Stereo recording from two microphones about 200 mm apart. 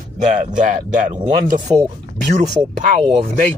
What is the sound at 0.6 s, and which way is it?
Speech, 40° right (ahead or behind).